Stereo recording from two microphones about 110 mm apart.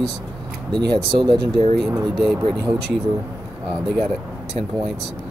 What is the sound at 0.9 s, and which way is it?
Speech, 45° right (ahead or behind).